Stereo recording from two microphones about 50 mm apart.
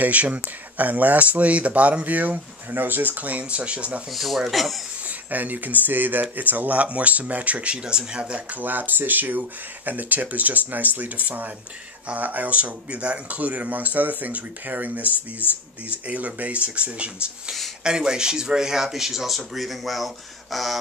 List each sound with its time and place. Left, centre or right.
0.0 s speech: right
4.1 s speech: centre
5.0 s speech: right; by 20.7 s centre